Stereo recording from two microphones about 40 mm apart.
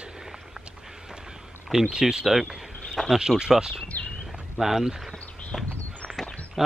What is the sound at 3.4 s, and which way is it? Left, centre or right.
Speech, centre.